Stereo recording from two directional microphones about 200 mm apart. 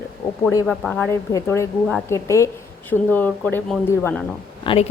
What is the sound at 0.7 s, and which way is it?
Speech, 5° left (ahead or behind).